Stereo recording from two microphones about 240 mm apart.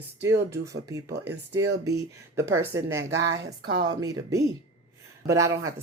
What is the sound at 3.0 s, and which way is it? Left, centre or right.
Speech, right.